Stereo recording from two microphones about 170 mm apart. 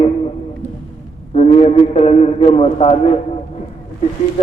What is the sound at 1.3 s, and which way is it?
A man's voice, 40° left (ahead or behind).